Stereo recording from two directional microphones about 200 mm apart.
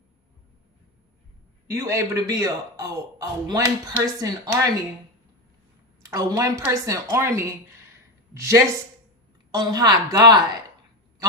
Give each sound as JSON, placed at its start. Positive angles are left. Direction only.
{"t": 1.6, "sound": "a man's voice", "side_deg": -15}
{"t": 6.0, "sound": "a man's voice", "side_deg": -15}